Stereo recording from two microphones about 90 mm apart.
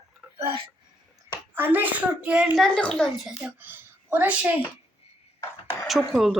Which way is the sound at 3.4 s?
20° right (ahead or behind).